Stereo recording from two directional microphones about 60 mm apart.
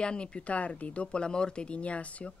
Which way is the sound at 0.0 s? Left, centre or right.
Centre.